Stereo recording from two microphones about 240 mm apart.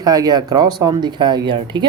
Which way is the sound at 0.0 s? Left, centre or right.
Centre.